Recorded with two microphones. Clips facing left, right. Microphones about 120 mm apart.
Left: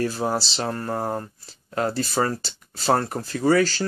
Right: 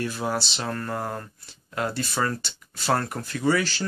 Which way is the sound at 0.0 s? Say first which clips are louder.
Left 3 dB; 35° left (ahead or behind).